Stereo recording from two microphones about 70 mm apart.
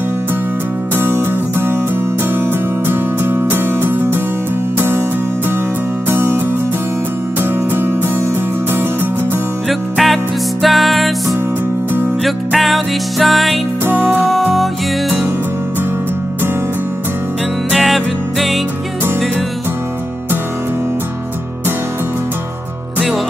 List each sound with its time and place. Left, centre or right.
0.9 s music: right
6.0 s music: right
7.7 s music: right
9.7 s music: centre
12.3 s music: centre
17.7 s music: centre